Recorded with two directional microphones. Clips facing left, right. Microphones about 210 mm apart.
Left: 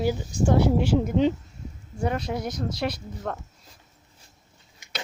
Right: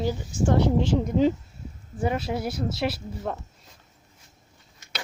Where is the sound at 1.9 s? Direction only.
5° right (ahead or behind).